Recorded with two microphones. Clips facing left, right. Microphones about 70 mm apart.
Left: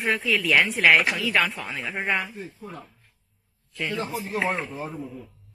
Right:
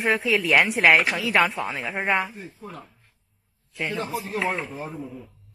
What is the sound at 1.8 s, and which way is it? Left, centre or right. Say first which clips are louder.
Speech: right 2 dB; centre.